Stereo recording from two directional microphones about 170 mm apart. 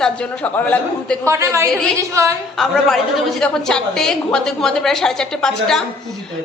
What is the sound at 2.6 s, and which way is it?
A woman's voice, centre (ahead or behind).